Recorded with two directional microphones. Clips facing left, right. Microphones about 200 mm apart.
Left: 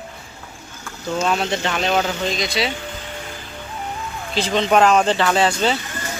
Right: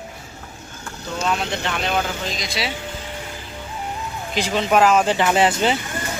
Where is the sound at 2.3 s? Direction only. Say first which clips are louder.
Left 5 dB; centre (ahead or behind).